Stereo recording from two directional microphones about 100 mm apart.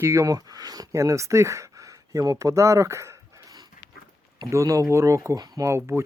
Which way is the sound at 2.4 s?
30° right (ahead or behind).